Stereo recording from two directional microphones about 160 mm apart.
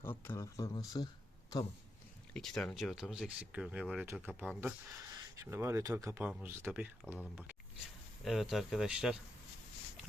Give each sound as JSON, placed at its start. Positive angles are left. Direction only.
{"t": 0.0, "sound": "speech", "side_deg": 15}
{"t": 2.3, "sound": "speech", "side_deg": 5}
{"t": 4.9, "sound": "speech", "side_deg": -20}
{"t": 8.2, "sound": "speech", "side_deg": 0}